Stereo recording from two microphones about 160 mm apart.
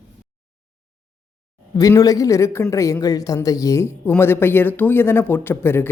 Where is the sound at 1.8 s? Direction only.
20° left (ahead or behind).